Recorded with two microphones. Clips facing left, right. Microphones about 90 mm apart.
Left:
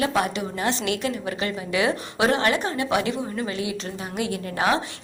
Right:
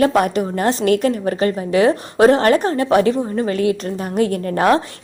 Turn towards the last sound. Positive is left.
turn(degrees=-50)  # may be behind; listen again after turning